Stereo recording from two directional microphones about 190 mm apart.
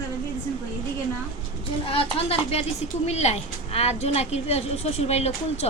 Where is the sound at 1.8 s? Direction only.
30° left (ahead or behind).